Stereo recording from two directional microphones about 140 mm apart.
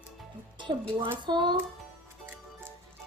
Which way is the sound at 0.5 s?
35° right (ahead or behind).